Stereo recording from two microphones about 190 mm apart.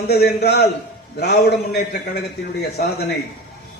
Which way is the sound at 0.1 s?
55° left (ahead or behind).